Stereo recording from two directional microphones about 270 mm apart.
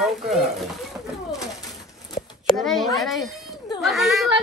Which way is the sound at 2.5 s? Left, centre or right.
Centre.